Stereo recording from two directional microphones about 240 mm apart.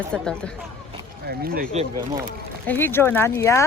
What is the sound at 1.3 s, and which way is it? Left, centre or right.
Speech, right.